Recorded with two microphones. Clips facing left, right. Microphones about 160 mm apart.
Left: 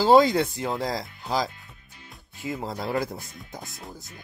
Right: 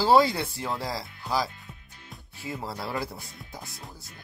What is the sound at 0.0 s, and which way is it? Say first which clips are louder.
Speech: left 3 dB; 20° left (ahead or behind).